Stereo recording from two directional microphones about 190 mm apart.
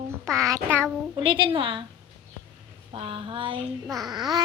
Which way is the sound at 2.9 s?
30° right (ahead or behind).